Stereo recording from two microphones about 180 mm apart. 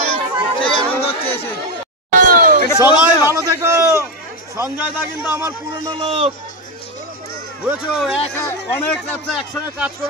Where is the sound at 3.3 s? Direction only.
15° right (ahead or behind).